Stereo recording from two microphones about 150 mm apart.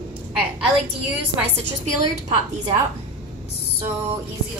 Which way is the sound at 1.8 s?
25° right (ahead or behind).